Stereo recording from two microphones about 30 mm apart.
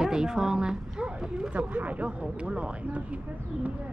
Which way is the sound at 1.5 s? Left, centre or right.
Right.